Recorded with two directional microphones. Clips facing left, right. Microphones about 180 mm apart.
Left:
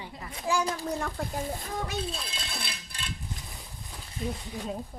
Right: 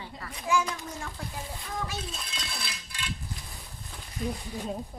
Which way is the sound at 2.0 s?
30° left (ahead or behind).